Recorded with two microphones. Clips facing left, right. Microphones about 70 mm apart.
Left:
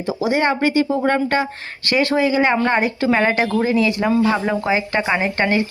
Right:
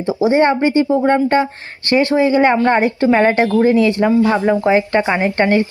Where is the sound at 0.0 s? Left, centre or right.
Right.